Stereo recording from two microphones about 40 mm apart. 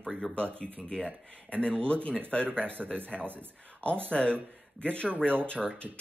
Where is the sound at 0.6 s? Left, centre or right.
Centre.